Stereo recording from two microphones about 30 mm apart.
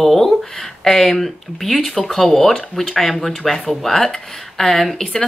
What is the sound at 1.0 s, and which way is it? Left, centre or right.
Speech, centre.